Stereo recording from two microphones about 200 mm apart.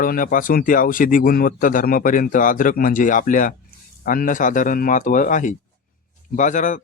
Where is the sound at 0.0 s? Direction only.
45° left (ahead or behind).